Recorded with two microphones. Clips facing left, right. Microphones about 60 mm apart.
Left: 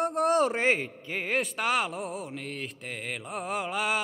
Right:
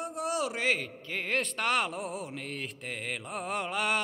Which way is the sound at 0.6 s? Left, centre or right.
Left.